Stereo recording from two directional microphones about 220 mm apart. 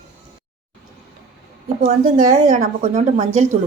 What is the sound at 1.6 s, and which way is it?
A woman's voice, 40° right (ahead or behind).